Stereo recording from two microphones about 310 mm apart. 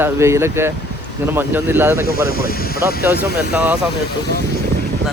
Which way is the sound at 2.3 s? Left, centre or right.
Left.